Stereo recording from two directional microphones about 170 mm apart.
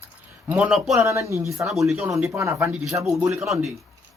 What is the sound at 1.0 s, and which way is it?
Speech, 15° right (ahead or behind).